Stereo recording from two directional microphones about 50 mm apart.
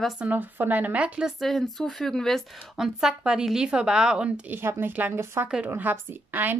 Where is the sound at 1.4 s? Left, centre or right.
Centre.